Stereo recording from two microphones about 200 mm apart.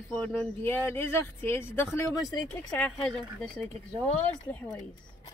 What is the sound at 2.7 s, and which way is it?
Speech, 5° left (ahead or behind).